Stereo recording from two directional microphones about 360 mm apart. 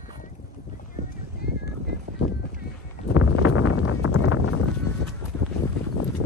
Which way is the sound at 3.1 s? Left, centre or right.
Left.